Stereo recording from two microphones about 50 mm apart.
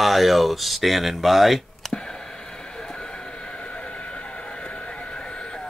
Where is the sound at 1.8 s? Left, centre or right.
Centre.